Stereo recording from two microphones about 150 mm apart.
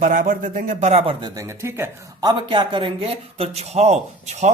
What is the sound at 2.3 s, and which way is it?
Speech, 30° right (ahead or behind).